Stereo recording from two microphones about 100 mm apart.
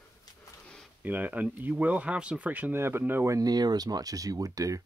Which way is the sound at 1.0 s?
15° right (ahead or behind).